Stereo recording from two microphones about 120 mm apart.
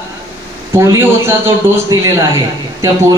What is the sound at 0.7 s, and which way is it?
Speech, 20° right (ahead or behind).